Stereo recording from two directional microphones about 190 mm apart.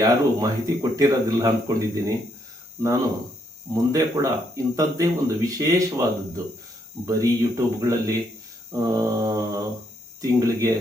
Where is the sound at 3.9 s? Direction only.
20° right (ahead or behind).